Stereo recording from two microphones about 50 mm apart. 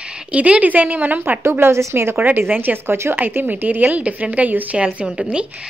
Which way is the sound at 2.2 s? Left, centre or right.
Right.